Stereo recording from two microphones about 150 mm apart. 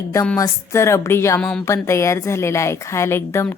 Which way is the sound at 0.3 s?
20° left (ahead or behind).